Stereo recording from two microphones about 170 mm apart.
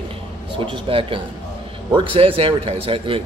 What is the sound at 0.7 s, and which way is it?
A man's voice, 30° right (ahead or behind).